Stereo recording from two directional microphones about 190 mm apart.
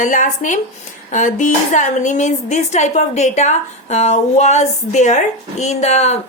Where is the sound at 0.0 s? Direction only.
40° left (ahead or behind).